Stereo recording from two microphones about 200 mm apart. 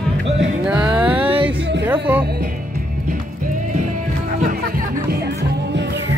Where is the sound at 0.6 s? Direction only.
5° right (ahead or behind).